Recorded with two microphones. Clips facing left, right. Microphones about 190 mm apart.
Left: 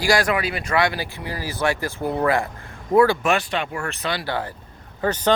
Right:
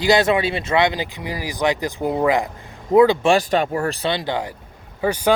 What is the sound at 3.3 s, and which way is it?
Speech, 40° right (ahead or behind).